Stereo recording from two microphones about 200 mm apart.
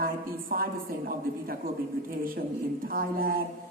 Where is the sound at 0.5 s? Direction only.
45° right (ahead or behind).